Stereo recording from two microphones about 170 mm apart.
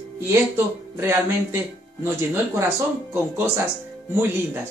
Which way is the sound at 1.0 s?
15° right (ahead or behind).